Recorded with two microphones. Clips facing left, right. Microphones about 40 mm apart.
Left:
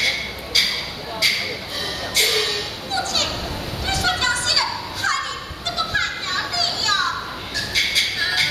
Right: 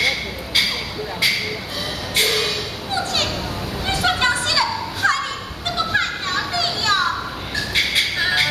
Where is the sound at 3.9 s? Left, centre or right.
Right.